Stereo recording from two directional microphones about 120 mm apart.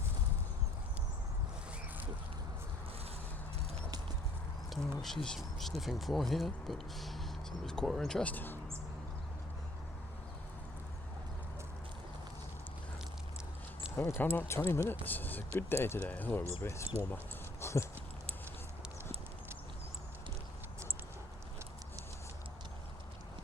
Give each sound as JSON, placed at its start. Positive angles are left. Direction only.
{"t": 4.7, "sound": "speech", "side_deg": 0}
{"t": 13.8, "sound": "a sound", "side_deg": -10}
{"t": 14.3, "sound": "speech", "side_deg": 20}
{"t": 17.6, "sound": "dog", "side_deg": 25}